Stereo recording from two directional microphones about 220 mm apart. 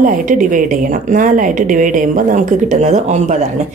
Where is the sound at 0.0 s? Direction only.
35° right (ahead or behind).